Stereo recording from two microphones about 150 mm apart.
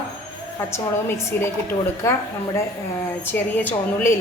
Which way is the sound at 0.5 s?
15° left (ahead or behind).